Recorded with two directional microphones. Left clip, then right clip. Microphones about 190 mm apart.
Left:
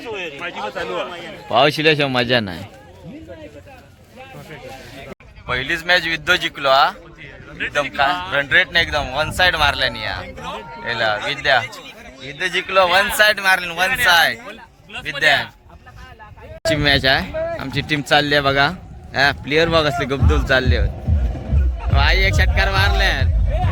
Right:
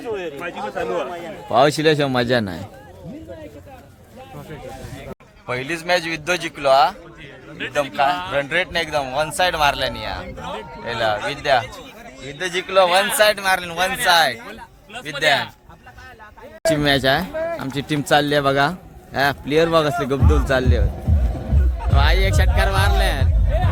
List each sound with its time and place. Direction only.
0.0 s a man's voice: 45° right (ahead or behind)
1.5 s speech: 5° right (ahead or behind)
5.5 s speech: 5° right (ahead or behind)
12.2 s speech: 15° right (ahead or behind)
16.6 s speech: 10° right (ahead or behind)
17.3 s a sound: 30° left (ahead or behind)
17.6 s speech: 10° right (ahead or behind)